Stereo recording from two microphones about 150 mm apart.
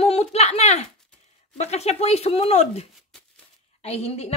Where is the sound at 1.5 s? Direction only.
45° left (ahead or behind).